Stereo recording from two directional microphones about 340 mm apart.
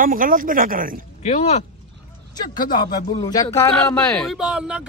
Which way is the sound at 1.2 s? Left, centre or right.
Centre.